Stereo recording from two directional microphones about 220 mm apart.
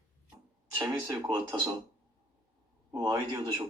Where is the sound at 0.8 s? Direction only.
15° right (ahead or behind).